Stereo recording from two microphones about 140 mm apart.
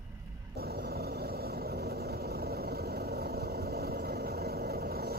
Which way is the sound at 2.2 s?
90° right.